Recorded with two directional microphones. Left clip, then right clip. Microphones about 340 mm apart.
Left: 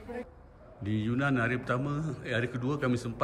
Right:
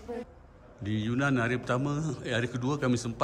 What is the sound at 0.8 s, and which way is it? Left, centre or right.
A man's voice, centre.